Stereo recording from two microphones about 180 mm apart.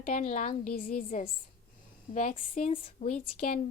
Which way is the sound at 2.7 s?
30° left (ahead or behind).